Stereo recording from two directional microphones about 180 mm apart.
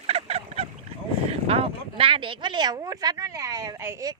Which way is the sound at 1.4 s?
35° right (ahead or behind).